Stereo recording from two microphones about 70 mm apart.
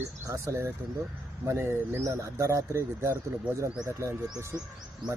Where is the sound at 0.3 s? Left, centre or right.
Right.